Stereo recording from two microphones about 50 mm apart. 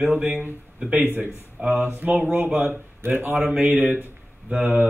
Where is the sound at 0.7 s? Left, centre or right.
Right.